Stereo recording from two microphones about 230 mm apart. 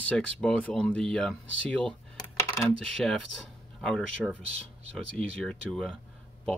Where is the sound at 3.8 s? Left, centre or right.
Centre.